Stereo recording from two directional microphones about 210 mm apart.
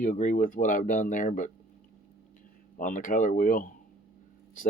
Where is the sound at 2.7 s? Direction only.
40° left (ahead or behind).